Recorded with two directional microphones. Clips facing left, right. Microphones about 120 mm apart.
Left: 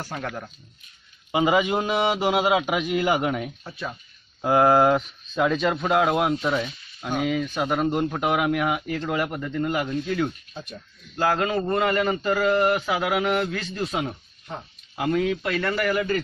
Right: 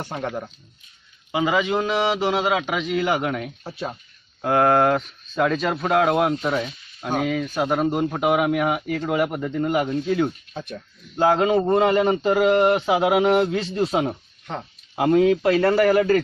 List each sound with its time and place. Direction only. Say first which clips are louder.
0.0 s a man's voice: right 4 dB; 25° right (ahead or behind)
1.3 s a man's voice: even; 20° left (ahead or behind)
3.6 s speech: right 3 dB; 30° right (ahead or behind)
4.4 s a man's voice: even; 5° left (ahead or behind); by 10.3 s 15° right (ahead or behind)
10.5 s speech: right 5 dB; 60° right (ahead or behind)
11.1 s a man's voice: right 5 dB; 20° right (ahead or behind)
14.5 s speech: right 4 dB; 90° right
15.0 s speech: right 6 dB; 30° right (ahead or behind)